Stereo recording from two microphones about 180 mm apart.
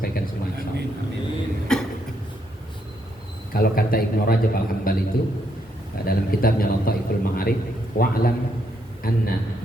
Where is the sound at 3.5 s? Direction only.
55° left (ahead or behind).